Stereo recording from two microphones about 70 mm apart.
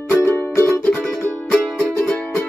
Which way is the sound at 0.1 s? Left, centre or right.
Left.